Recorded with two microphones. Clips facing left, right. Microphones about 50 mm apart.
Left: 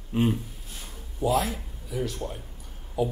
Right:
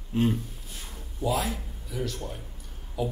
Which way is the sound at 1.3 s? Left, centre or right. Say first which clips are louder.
Left 3 dB; centre.